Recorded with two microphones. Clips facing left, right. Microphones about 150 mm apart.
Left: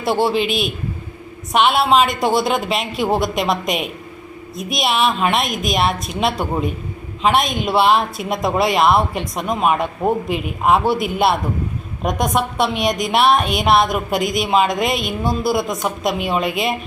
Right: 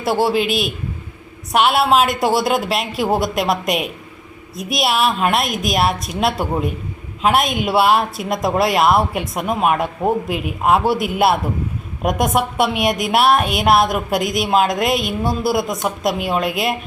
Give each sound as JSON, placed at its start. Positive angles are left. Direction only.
{"t": 0.0, "sound": "a woman's voice", "side_deg": 0}